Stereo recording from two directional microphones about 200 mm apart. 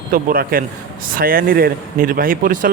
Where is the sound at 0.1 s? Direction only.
45° right (ahead or behind).